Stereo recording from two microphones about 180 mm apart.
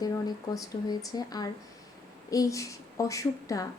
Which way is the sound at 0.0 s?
20° left (ahead or behind).